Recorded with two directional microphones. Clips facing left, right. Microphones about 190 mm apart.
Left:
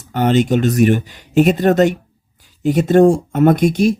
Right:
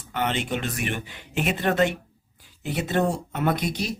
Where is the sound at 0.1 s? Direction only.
40° left (ahead or behind).